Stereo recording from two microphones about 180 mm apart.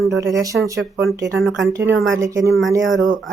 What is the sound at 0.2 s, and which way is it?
A woman's voice, 15° right (ahead or behind).